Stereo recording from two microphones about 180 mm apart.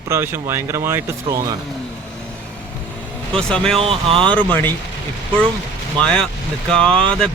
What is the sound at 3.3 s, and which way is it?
Speech, 5° left (ahead or behind).